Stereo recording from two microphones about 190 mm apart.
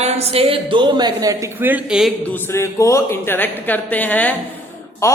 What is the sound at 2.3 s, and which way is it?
Speech, 10° left (ahead or behind).